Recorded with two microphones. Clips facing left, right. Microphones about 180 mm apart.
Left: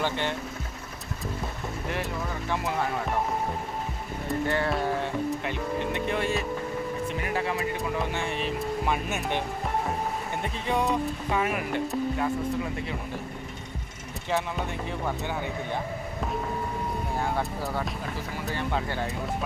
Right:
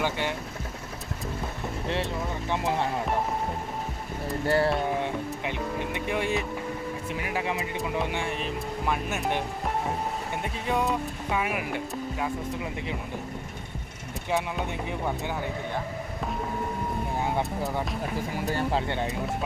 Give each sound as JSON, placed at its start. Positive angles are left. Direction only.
{"t": 0.0, "sound": "speech", "side_deg": -10}
{"t": 1.9, "sound": "speech", "side_deg": -25}
{"t": 4.4, "sound": "speech", "side_deg": -35}
{"t": 5.5, "sound": "music", "side_deg": -15}
{"t": 7.2, "sound": "speech", "side_deg": -10}
{"t": 8.9, "sound": "speech", "side_deg": 0}
{"t": 10.4, "sound": "speech", "side_deg": -5}
{"t": 14.3, "sound": "speech", "side_deg": -15}
{"t": 17.2, "sound": "speech", "side_deg": -20}
{"t": 18.5, "sound": "speech", "side_deg": -30}